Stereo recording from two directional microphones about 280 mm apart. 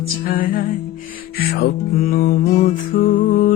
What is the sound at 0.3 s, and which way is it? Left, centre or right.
Music, left.